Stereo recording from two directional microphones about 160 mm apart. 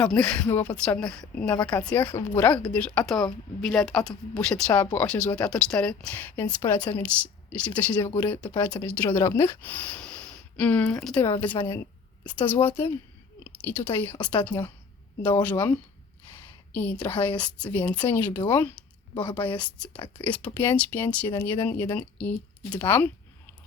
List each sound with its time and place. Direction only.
0.0 s speech: 5° left (ahead or behind)
8.5 s speech: 25° left (ahead or behind)
8.8 s speech: 10° left (ahead or behind)